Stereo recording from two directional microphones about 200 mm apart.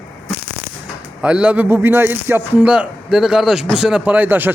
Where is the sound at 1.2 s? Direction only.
5° right (ahead or behind).